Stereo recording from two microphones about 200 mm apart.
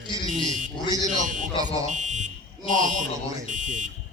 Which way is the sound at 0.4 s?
40° right (ahead or behind).